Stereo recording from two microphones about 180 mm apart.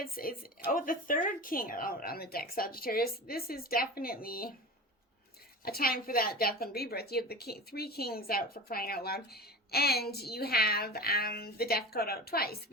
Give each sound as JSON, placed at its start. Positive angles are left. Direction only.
{"t": 0.0, "sound": "a woman's voice", "side_deg": 55}
{"t": 5.6, "sound": "a woman's voice", "side_deg": 55}